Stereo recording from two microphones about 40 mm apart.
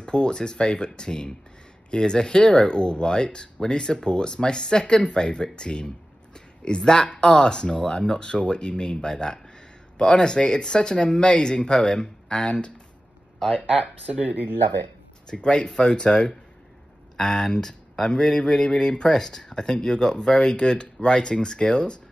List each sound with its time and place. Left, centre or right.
0.0 s speech: left
14.2 s speech: right
15.2 s speech: left